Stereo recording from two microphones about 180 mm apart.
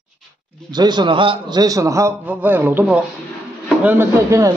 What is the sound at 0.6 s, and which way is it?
A man's voice, 25° right (ahead or behind).